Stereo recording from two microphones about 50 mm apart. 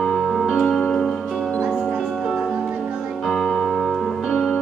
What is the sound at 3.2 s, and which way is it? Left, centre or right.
Music, centre.